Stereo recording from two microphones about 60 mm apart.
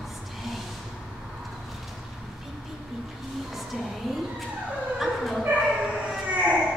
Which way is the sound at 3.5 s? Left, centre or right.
Centre.